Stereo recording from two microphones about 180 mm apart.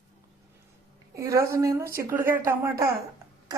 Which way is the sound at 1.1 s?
15° right (ahead or behind).